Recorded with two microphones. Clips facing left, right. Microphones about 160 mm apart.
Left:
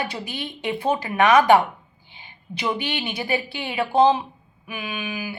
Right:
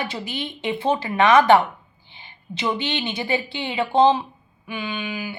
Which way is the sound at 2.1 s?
15° left (ahead or behind).